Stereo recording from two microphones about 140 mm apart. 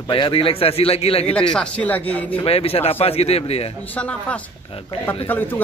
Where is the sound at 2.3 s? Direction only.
45° left (ahead or behind).